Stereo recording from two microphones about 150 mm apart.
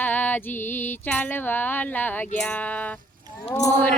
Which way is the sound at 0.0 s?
10° left (ahead or behind).